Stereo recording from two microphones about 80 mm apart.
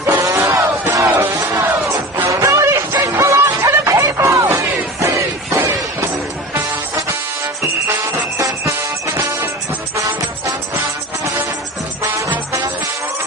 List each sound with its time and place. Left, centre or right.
0.2 s crowd: right
1.0 s music: right
1.4 s music: right
2.3 s a sound: right
3.0 s music: right
4.2 s a sound: right
8.4 s music: right
10.0 s music: right